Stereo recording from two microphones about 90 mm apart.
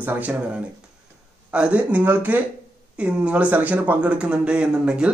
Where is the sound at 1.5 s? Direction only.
10° right (ahead or behind).